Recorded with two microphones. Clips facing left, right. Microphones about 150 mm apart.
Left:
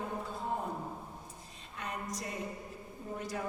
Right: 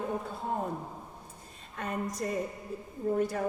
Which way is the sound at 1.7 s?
50° right (ahead or behind).